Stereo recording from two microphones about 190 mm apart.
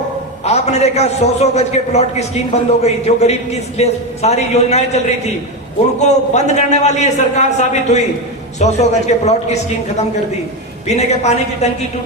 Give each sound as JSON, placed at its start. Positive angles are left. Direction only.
{"t": 0.4, "sound": "a man's voice", "side_deg": 35}
{"t": 10.8, "sound": "a man's voice", "side_deg": 35}